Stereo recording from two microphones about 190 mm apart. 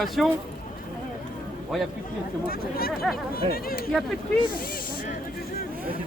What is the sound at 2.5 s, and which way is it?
Speech, 50° left (ahead or behind).